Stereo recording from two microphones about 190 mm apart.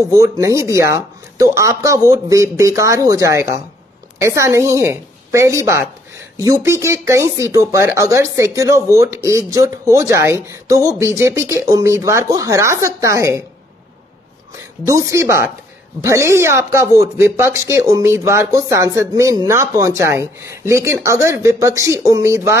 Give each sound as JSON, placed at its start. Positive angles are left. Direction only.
{"t": 0.1, "sound": "speech", "side_deg": -15}
{"t": 14.9, "sound": "speech", "side_deg": -15}